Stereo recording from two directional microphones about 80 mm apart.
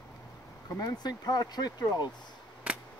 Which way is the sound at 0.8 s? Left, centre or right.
Left.